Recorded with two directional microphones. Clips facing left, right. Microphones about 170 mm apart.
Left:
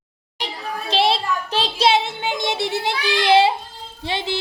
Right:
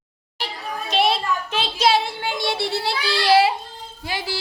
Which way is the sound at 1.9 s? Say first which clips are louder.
Even; 20° left (ahead or behind).